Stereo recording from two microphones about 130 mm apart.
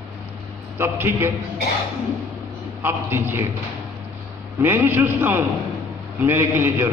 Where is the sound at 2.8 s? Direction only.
15° right (ahead or behind).